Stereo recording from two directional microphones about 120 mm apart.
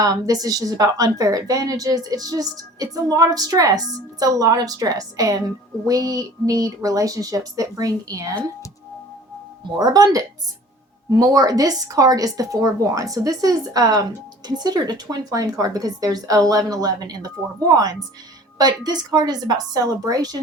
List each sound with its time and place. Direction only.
0.0 s speech: 30° right (ahead or behind)
9.7 s speech: 35° right (ahead or behind)